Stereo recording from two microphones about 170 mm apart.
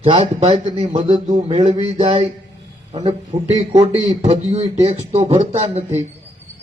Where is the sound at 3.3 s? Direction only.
25° right (ahead or behind).